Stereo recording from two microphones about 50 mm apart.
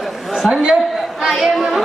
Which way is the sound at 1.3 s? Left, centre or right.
Centre.